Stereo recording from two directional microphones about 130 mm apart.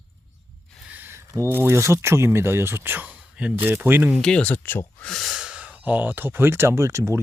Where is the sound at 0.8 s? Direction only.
15° right (ahead or behind).